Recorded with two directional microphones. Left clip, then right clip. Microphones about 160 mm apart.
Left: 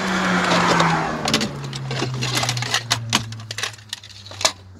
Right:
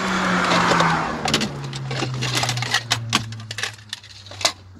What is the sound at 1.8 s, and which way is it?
Sewing machine, 45° left (ahead or behind).